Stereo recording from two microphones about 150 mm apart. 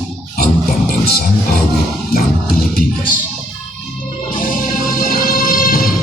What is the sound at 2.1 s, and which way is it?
Music, 80° left.